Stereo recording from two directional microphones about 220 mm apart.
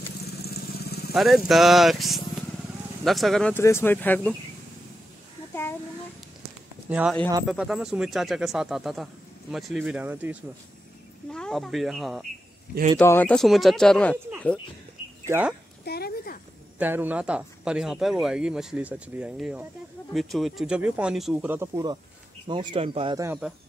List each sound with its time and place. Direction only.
0.4 s vehicle: 45° left (ahead or behind)
1.1 s speech: centre (ahead or behind)
5.5 s a sound: 10° left (ahead or behind)
6.9 s speech: 5° right (ahead or behind)
11.3 s speech: centre (ahead or behind)
15.2 s speech: 10° right (ahead or behind)
15.8 s a sound: 45° left (ahead or behind)
16.7 s speech: 10° right (ahead or behind); by 23.2 s 25° right (ahead or behind)
23.2 s speech: 5° right (ahead or behind)